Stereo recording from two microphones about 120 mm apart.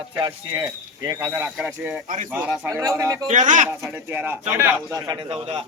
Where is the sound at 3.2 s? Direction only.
90° right.